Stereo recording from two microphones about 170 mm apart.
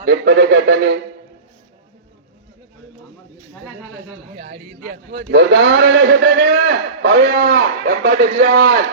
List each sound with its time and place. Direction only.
0.0 s speech: 90° right
5.3 s a man's voice: 90° right; by 8.8 s 65° right (ahead or behind)